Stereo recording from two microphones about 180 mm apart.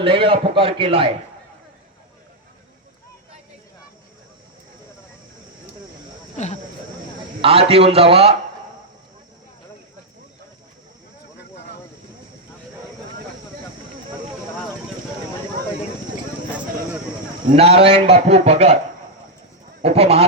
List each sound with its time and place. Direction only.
0.0 s a man's voice: 30° right (ahead or behind)
6.3 s speech: 40° left (ahead or behind)
7.4 s a man's voice: 35° right (ahead or behind)
17.5 s a man's voice: 35° right (ahead or behind)
19.8 s a man's voice: 35° right (ahead or behind)